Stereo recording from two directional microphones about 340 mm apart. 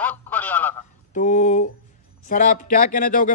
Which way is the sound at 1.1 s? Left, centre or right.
Left.